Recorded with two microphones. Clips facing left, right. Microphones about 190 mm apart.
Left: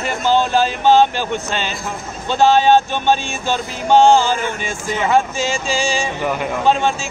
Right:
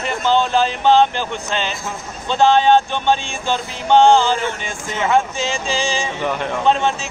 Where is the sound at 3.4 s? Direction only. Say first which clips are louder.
Left 1 dB; 10° left (ahead or behind).